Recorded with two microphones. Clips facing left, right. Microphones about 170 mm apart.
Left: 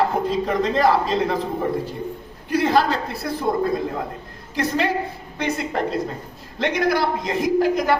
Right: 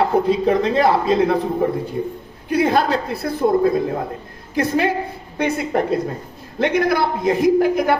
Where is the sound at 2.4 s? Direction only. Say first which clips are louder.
Right 2 dB; 55° right (ahead or behind).